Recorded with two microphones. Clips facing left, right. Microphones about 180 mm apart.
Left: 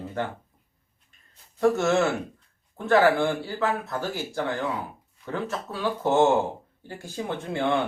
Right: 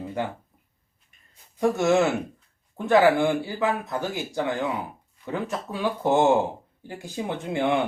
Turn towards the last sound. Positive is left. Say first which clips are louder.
# right 1 dB
turn(degrees=-15)  # may be behind; listen again after turning